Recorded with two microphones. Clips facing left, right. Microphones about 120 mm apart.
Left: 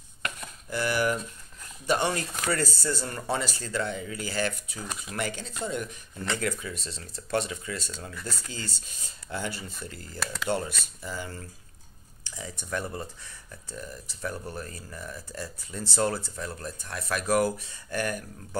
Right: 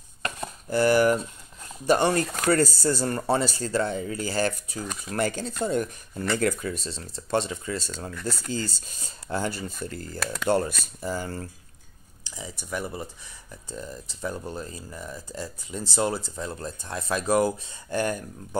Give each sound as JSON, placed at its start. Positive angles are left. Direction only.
{"t": 0.2, "sound": "chopping", "side_deg": -35}
{"t": 1.9, "sound": "speech", "side_deg": -40}
{"t": 8.1, "sound": "speech", "side_deg": 0}
{"t": 8.5, "sound": "speech", "side_deg": -35}
{"t": 10.1, "sound": "speech", "side_deg": 0}
{"t": 11.0, "sound": "speech", "side_deg": -40}
{"t": 12.3, "sound": "speech", "side_deg": -15}